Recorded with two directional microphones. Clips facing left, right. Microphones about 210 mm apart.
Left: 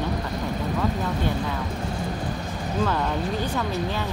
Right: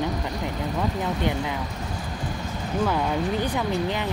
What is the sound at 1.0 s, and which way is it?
Speech, 15° right (ahead or behind).